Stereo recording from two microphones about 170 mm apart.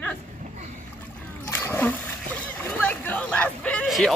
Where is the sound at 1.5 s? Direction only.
15° left (ahead or behind).